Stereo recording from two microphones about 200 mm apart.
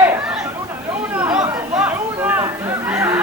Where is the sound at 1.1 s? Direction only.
5° right (ahead or behind).